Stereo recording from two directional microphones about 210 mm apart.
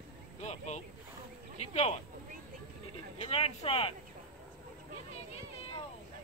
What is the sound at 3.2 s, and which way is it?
Speech, 30° left (ahead or behind).